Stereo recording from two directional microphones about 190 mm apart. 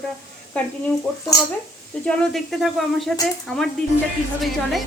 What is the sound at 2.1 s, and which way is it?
Speech, 5° left (ahead or behind).